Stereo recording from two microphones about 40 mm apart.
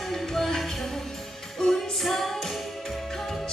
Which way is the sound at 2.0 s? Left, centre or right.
Centre.